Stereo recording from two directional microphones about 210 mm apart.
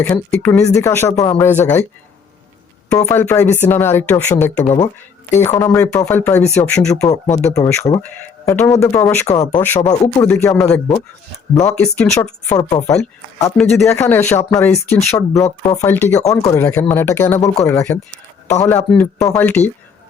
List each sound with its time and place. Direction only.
0.0 s speech: 10° left (ahead or behind)
3.0 s speech: 10° left (ahead or behind)
4.6 s speech: 30° left (ahead or behind)
5.4 s speech: 10° left (ahead or behind)
7.1 s speech: 35° left (ahead or behind)
7.6 s speech: 15° left (ahead or behind)